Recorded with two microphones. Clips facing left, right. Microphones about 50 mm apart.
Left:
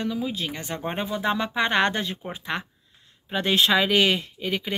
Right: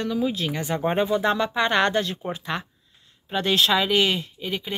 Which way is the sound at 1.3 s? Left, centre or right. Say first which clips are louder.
Right 1 dB; left.